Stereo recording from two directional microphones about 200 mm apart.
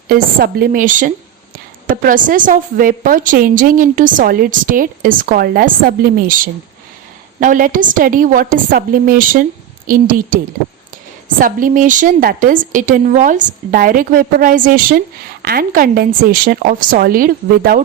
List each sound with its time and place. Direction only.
0.1 s a woman's voice: 50° right (ahead or behind)